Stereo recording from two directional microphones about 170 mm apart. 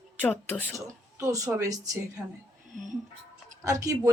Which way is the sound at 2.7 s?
45° right (ahead or behind).